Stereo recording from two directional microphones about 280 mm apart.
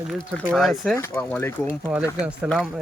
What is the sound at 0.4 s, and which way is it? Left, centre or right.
Speech, centre.